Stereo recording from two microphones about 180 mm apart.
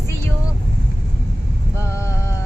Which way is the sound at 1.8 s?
15° left (ahead or behind).